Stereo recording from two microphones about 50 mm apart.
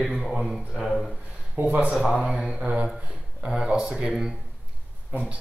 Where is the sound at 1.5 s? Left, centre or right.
Right.